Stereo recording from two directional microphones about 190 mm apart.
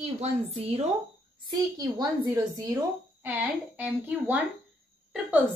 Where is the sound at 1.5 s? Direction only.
20° right (ahead or behind).